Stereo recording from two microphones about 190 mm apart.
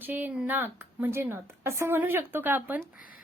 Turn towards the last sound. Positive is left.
turn(degrees=50)  # may be behind; listen again after turning